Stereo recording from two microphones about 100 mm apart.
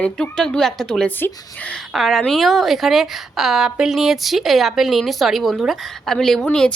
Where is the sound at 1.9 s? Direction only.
Centre (ahead or behind).